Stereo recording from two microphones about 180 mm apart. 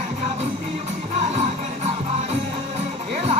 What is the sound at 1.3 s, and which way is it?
Music, 35° right (ahead or behind).